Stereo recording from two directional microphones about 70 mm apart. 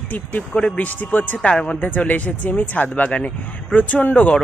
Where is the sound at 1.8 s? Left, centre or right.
Left.